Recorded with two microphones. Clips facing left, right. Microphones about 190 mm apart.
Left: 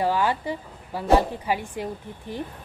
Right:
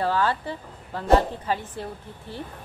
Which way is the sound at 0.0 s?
15° left (ahead or behind).